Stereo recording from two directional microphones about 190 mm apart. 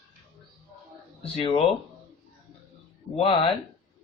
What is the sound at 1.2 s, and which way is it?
Speech, 30° left (ahead or behind).